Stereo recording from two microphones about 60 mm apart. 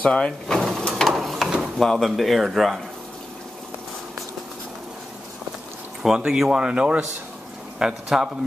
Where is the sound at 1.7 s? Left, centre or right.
Centre.